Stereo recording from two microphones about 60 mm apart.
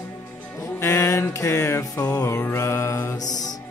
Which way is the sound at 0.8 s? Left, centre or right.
Left.